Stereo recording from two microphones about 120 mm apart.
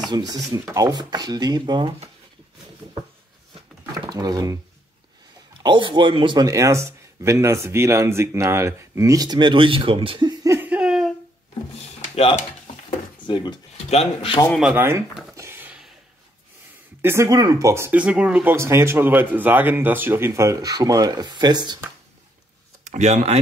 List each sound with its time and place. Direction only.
0.1 s speech: 35° right (ahead or behind)
4.0 s speech: 35° right (ahead or behind)
5.6 s speech: 40° right (ahead or behind)
6.5 s speech: 25° right (ahead or behind); by 10.3 s 45° right (ahead or behind)
10.4 s a sound: 20° right (ahead or behind)
10.7 s a sound: 5° right (ahead or behind)
13.3 s speech: 40° left (ahead or behind)
13.7 s speech: 60° left (ahead or behind)
14.8 s speech: 20° right (ahead or behind)
15.3 s a sound: 20° right (ahead or behind)
17.0 s speech: 20° right (ahead or behind)
17.9 s speech: 10° right (ahead or behind); by 21.7 s 35° right (ahead or behind)
22.8 s speech: 75° right (ahead or behind)